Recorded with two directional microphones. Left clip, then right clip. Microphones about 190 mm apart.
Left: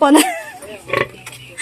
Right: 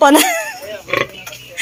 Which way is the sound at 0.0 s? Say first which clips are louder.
Right 2 dB; centre (ahead or behind).